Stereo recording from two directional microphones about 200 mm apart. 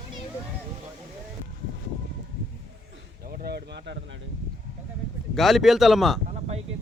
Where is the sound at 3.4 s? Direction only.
50° right (ahead or behind).